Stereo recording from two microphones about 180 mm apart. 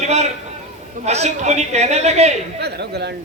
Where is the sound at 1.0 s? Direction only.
35° right (ahead or behind).